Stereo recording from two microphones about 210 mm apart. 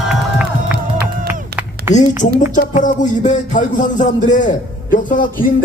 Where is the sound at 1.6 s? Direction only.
5° right (ahead or behind).